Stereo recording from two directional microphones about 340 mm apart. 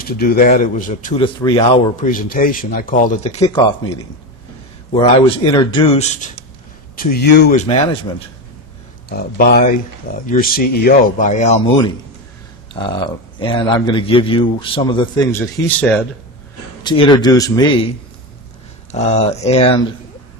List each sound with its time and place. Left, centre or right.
0.0 s speech: left; by 3.9 s centre
4.9 s a man's voice: centre
9.0 s speech: left
12.7 s a man's voice: centre
18.9 s speech: centre